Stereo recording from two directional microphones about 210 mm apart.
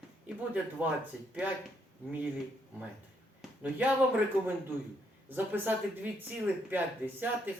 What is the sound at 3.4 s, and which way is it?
Speech, 5° right (ahead or behind).